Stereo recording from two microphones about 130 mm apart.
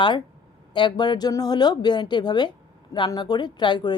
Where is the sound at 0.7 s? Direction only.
35° left (ahead or behind).